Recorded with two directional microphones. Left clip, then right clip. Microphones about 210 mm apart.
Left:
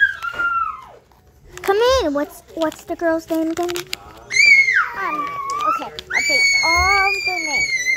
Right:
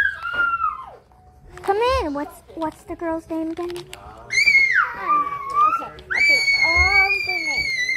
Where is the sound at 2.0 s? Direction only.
15° left (ahead or behind).